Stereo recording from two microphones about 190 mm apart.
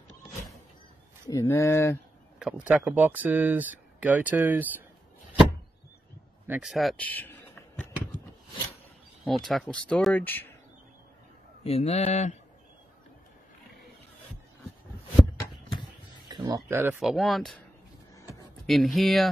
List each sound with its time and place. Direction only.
1.3 s speech: 15° left (ahead or behind)
2.3 s speech: 5° right (ahead or behind)
6.4 s speech: 5° right (ahead or behind); by 7.3 s 10° left (ahead or behind)
9.2 s speech: centre (ahead or behind)
11.6 s a man's voice: 35° left (ahead or behind)
16.3 s speech: 20° right (ahead or behind)
17.0 s speech: centre (ahead or behind)
18.7 s speech: centre (ahead or behind)